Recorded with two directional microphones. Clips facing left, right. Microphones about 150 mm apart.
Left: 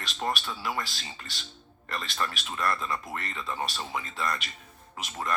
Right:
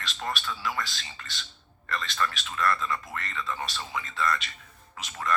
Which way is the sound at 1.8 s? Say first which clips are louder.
Right 2 dB; 35° left (ahead or behind).